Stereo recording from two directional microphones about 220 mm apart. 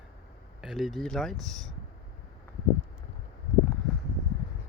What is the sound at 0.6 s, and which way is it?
Speech, centre (ahead or behind).